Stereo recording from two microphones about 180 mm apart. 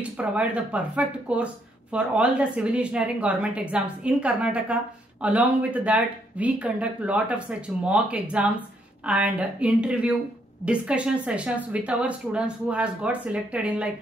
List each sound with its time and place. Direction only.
0.2 s speech: 5° right (ahead or behind)